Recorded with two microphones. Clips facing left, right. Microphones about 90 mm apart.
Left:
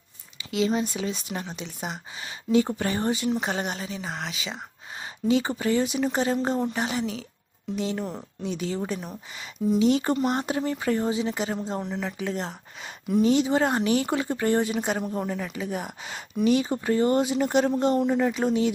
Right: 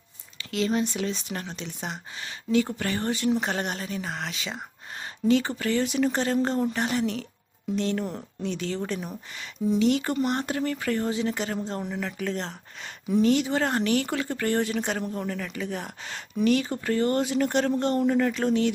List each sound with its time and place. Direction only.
0.3 s speech: 5° left (ahead or behind)
2.5 s speech: 20° left (ahead or behind)
3.2 s speech: 5° left (ahead or behind)
5.3 s speech: 15° left (ahead or behind)
9.7 s speech: 20° left (ahead or behind)
11.8 s speech: centre (ahead or behind)
13.2 s speech: 20° left (ahead or behind)